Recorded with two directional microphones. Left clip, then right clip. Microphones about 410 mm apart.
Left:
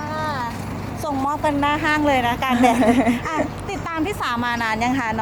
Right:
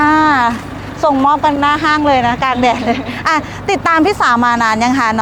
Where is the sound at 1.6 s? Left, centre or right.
Right.